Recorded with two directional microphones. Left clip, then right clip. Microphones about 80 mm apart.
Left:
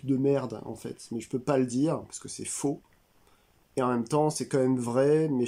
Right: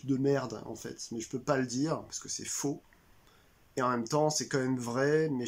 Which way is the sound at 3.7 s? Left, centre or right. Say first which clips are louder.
Left 3 dB; left.